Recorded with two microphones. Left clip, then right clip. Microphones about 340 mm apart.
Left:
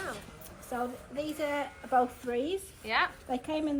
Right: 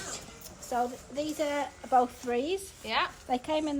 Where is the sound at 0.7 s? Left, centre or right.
Right.